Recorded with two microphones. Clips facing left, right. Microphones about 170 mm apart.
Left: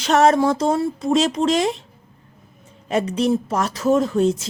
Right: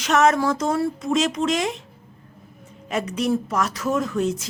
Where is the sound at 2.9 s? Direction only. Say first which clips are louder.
Left 4 dB; 30° left (ahead or behind).